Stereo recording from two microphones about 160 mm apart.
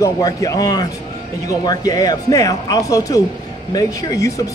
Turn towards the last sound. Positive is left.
turn(degrees=20)  # may be behind; listen again after turning